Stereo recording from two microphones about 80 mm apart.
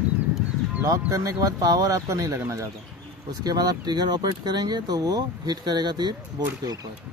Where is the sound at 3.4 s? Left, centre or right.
Right.